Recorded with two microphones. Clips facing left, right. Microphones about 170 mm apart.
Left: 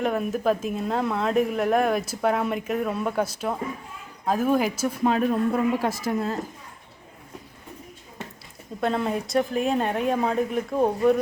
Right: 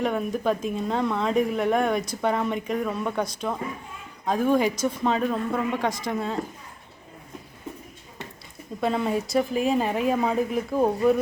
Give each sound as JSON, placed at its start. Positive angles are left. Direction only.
{"t": 0.0, "sound": "speech", "side_deg": 0}
{"t": 8.8, "sound": "speech", "side_deg": 0}